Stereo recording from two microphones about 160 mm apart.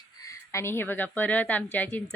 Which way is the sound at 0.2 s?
20° left (ahead or behind).